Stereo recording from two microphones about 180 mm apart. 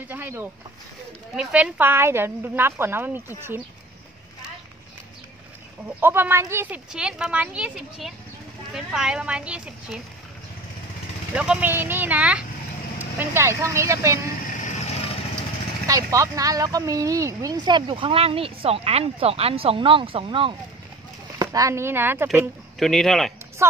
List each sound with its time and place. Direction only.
0.1 s a woman's voice: 10° right (ahead or behind)
5.9 s a woman's voice: 10° right (ahead or behind)
11.3 s a woman's voice: 5° right (ahead or behind)
14.6 s vehicle: 35° left (ahead or behind)
15.9 s speech: 20° right (ahead or behind)
21.4 s a woman's voice: 20° right (ahead or behind)
22.8 s speech: centre (ahead or behind)
23.6 s a woman's voice: 15° right (ahead or behind)